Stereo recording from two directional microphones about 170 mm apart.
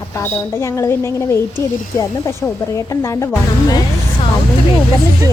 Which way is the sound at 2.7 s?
20° left (ahead or behind).